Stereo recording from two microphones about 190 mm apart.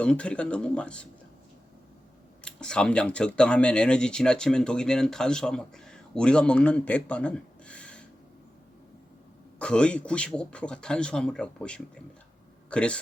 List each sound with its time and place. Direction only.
0.0 s speech: 5° left (ahead or behind)
2.4 s speech: 5° left (ahead or behind)
9.6 s speech: 5° left (ahead or behind)